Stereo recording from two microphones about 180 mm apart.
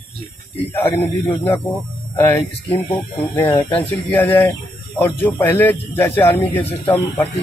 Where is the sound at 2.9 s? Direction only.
10° left (ahead or behind).